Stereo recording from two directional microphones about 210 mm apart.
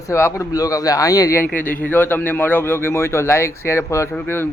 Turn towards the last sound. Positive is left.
turn(degrees=10)  # may be behind; listen again after turning